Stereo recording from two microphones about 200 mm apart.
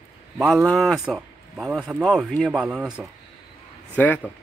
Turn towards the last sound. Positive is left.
turn(degrees=10)  # may be behind; listen again after turning